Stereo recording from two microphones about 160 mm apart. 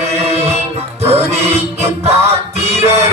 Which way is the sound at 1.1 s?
40° right (ahead or behind).